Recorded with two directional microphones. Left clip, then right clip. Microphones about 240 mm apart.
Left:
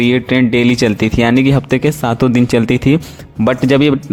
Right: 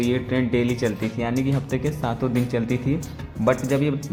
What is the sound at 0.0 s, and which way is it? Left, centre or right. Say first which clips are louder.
Speech: left 11 dB; left.